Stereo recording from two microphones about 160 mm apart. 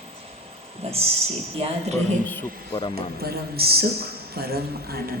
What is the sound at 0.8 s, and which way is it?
Speech, 40° right (ahead or behind).